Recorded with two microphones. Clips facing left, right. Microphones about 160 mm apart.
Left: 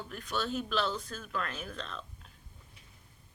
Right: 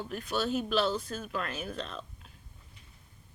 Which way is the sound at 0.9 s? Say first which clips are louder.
Right 4 dB; 30° right (ahead or behind).